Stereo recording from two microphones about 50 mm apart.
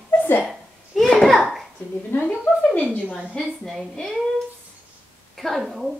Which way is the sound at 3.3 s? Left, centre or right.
Centre.